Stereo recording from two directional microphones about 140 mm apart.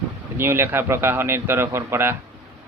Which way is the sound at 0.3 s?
15° right (ahead or behind).